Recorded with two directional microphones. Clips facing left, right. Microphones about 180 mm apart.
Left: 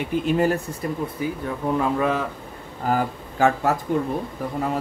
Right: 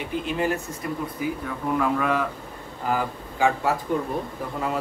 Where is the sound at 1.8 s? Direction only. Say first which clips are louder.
Even; 25° left (ahead or behind).